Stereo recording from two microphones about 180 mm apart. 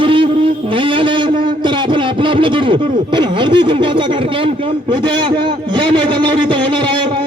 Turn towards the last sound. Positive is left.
turn(degrees=-25)  # may be behind; listen again after turning